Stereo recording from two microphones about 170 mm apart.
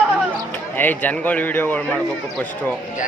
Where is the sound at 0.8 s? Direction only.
10° left (ahead or behind).